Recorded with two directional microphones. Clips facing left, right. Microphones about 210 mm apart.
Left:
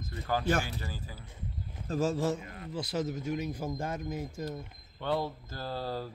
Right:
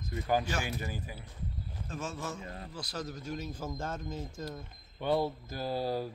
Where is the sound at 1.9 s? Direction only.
35° left (ahead or behind).